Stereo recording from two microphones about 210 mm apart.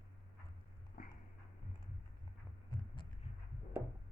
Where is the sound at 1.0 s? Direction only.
40° left (ahead or behind).